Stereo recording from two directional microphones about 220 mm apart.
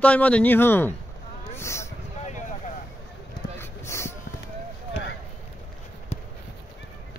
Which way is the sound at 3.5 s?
10° left (ahead or behind).